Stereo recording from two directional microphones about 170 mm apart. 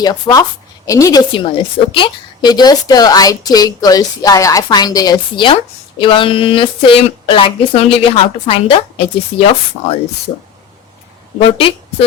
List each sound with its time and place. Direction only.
0.0 s a woman's voice: 20° left (ahead or behind)
11.5 s a woman's voice: 30° left (ahead or behind)